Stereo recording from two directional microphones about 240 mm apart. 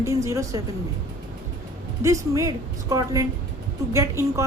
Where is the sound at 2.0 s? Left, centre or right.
Centre.